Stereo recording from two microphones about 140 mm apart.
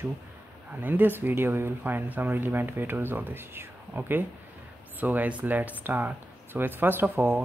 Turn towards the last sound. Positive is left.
turn(degrees=-15)  # may be behind; listen again after turning